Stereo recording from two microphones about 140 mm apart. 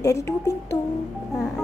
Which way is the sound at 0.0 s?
25° left (ahead or behind).